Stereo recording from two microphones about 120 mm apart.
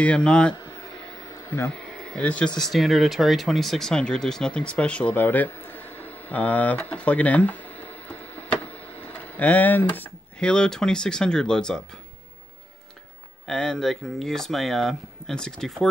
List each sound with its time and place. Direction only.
0.0 s a man's voice: 10° left (ahead or behind)
1.3 s a sound: 20° left (ahead or behind)
1.7 s speech: 5° left (ahead or behind)
2.6 s speech: centre (ahead or behind)
13.5 s speech: 5° left (ahead or behind)